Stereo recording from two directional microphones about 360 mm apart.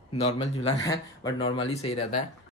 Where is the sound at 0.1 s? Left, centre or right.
Centre.